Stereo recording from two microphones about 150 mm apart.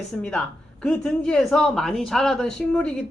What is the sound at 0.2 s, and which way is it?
A woman's voice, 5° left (ahead or behind).